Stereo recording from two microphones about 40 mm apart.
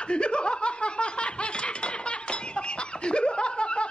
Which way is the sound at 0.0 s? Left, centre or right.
Left.